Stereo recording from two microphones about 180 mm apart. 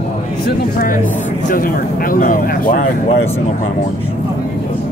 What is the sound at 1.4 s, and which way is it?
Speech, 50° left (ahead or behind).